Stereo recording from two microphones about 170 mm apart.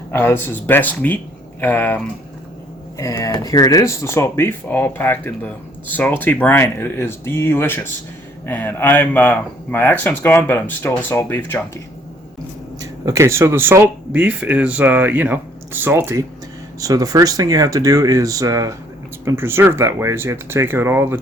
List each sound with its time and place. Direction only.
0.1 s speech: 15° left (ahead or behind)
12.8 s speech: 20° right (ahead or behind)